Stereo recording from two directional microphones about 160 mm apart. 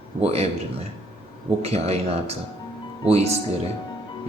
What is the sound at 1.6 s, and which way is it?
Speech, 40° right (ahead or behind).